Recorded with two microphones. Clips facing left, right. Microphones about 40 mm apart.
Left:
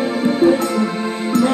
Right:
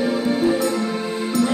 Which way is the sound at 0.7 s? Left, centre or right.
Left.